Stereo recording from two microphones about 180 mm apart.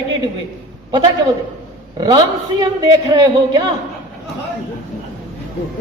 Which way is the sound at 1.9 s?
20° right (ahead or behind).